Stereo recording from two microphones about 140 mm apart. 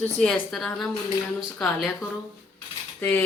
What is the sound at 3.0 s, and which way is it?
Mechanisms, 15° left (ahead or behind).